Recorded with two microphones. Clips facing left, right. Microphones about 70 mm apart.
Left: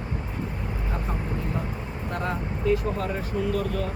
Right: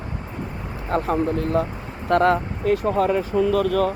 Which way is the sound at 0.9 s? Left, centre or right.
Right.